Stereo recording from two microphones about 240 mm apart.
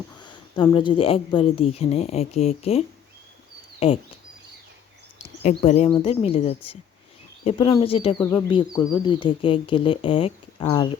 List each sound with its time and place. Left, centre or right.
0.2 s speech: centre
5.4 s speech: left
8.2 s speech: centre